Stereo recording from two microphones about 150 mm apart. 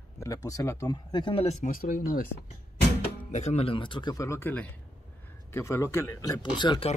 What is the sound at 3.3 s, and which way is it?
Speech, 50° left (ahead or behind).